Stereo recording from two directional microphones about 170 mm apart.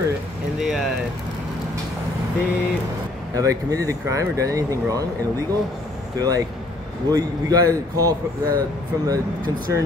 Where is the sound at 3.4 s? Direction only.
20° right (ahead or behind).